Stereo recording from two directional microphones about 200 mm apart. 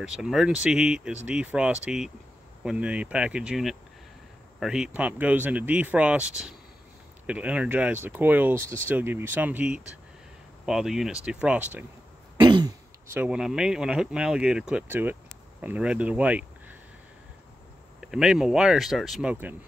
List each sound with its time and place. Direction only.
0.0 s speech: 5° right (ahead or behind)
12.4 s throat clearing: 20° right (ahead or behind)
13.1 s speech: 5° right (ahead or behind)
18.0 s speech: 5° right (ahead or behind)